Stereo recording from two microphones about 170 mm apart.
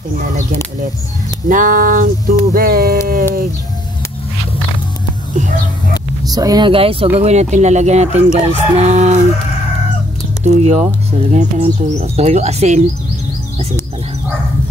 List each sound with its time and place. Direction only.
1.5 s speech: 50° right (ahead or behind)
2.5 s a sound: 60° right (ahead or behind)
6.2 s speech: 20° right (ahead or behind); by 9.2 s 40° right (ahead or behind)
10.4 s speech: 40° right (ahead or behind)